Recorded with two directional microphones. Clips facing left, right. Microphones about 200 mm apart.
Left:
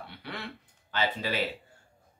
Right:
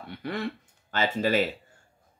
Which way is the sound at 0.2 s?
45° right (ahead or behind).